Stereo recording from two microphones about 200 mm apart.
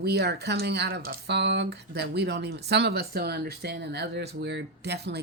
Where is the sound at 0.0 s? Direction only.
55° right (ahead or behind).